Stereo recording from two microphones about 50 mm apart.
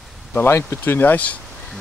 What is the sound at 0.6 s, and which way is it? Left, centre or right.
Speech, left.